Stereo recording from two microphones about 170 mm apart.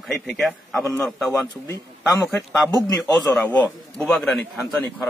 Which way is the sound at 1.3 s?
15° left (ahead or behind).